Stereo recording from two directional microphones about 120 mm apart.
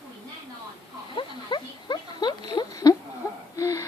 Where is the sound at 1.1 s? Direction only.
40° left (ahead or behind).